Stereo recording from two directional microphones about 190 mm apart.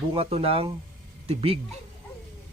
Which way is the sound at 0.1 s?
30° right (ahead or behind).